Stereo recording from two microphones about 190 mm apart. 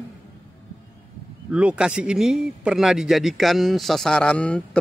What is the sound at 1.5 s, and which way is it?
Speech, 5° right (ahead or behind).